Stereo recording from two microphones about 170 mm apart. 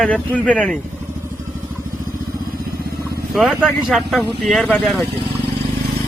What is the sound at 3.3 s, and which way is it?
Speech, centre (ahead or behind).